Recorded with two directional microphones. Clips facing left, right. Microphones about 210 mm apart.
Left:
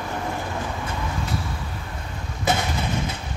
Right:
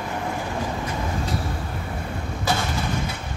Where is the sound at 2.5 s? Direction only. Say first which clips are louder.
Left 2 dB; 20° left (ahead or behind).